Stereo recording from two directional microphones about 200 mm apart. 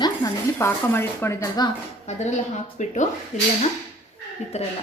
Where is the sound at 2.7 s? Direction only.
35° left (ahead or behind).